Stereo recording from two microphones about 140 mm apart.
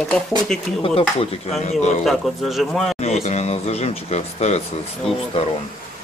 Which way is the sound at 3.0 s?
50° left (ahead or behind).